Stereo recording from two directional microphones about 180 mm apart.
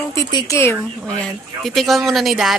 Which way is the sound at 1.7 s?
Centre (ahead or behind).